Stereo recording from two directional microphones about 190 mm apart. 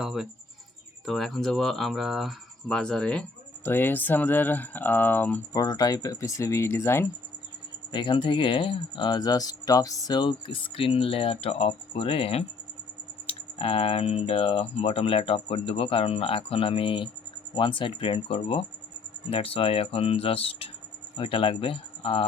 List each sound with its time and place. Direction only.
0.0 s speech: centre (ahead or behind)
5.6 s speech: 20° left (ahead or behind)
7.9 s speech: 25° left (ahead or behind)